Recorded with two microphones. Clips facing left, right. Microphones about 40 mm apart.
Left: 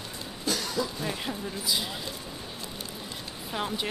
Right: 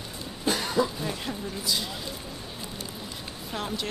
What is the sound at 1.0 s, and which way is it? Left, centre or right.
Speech, centre.